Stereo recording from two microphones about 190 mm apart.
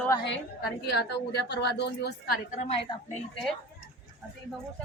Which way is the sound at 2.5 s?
40° left (ahead or behind).